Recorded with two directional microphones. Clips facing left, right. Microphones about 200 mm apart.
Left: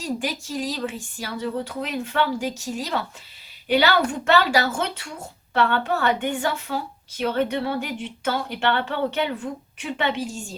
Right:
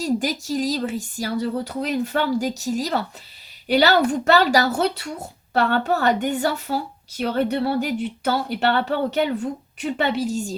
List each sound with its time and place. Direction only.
0.0 s speech: 40° right (ahead or behind)